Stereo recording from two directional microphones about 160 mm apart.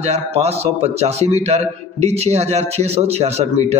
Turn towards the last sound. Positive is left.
turn(degrees=-40)  # may be behind; listen again after turning